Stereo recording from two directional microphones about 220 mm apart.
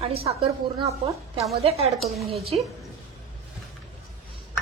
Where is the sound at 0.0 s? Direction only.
25° right (ahead or behind).